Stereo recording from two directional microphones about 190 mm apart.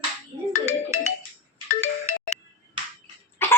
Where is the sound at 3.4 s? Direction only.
10° left (ahead or behind).